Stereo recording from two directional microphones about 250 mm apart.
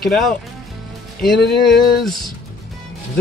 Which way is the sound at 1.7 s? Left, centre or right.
Centre.